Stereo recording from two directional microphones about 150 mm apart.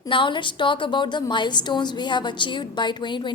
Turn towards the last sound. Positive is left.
turn(degrees=30)  # may be behind; listen again after turning